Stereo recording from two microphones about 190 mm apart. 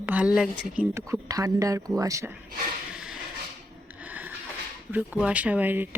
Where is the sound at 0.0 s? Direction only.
5° right (ahead or behind).